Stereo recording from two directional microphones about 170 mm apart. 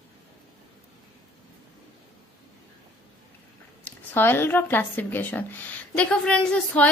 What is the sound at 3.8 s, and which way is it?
A woman's voice, 10° left (ahead or behind).